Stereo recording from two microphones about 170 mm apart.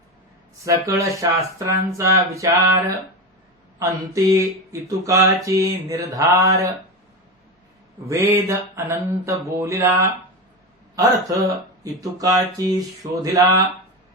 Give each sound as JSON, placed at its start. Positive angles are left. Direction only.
{"t": 0.6, "sound": "speech", "side_deg": -20}
{"t": 8.0, "sound": "speech", "side_deg": -15}